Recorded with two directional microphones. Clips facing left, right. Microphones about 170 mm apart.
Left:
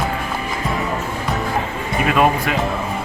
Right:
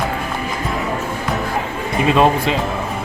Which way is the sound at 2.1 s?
25° right (ahead or behind).